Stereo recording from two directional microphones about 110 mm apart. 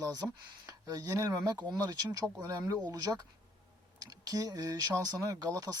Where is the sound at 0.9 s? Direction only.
35° right (ahead or behind).